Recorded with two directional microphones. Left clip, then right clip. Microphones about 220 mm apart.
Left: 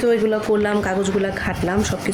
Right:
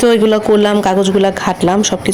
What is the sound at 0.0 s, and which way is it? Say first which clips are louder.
A man's voice: right 8 dB; 40° right (ahead or behind).